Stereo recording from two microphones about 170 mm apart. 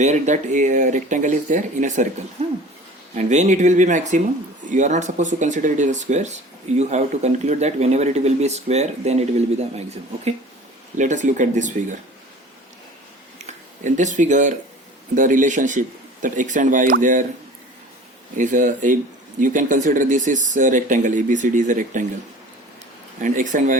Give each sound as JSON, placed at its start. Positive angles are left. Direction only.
{"t": 0.0, "sound": "speech", "side_deg": -45}
{"t": 13.5, "sound": "speech", "side_deg": -45}
{"t": 18.3, "sound": "speech", "side_deg": -50}
{"t": 23.2, "sound": "speech", "side_deg": -50}